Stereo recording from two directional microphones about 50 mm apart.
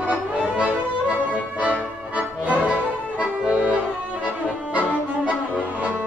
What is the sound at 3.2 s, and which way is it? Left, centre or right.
Accordion, right.